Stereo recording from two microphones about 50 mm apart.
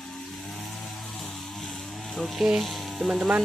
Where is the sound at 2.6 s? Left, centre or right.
Centre.